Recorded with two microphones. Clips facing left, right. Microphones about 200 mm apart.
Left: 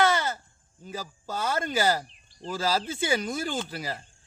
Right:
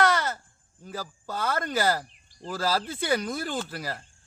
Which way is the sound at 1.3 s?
Centre (ahead or behind).